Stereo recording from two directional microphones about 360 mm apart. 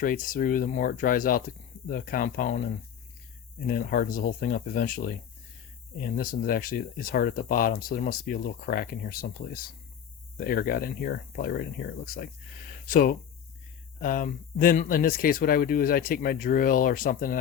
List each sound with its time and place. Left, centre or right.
0.0 s speech: left
3.7 s speech: left